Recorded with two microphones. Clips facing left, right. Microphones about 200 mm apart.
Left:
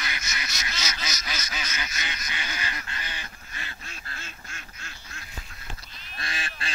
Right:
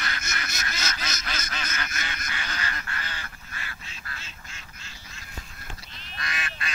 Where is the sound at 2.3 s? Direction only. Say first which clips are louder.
Right 1 dB; 15° left (ahead or behind).